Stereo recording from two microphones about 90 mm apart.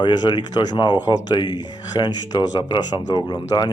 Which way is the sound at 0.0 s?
55° left (ahead or behind).